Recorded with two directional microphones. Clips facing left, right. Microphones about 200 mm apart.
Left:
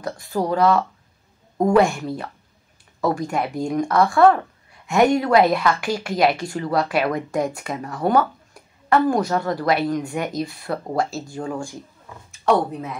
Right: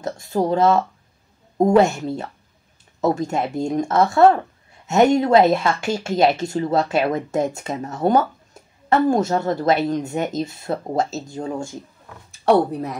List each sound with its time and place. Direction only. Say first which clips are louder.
0.0 s speech: right 2 dB; 25° right (ahead or behind)
12.3 s speech: right 3 dB; 35° right (ahead or behind)